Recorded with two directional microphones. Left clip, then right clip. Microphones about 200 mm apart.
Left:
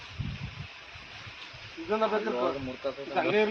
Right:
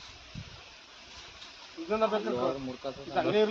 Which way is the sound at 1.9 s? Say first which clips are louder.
Left 1 dB; 20° right (ahead or behind).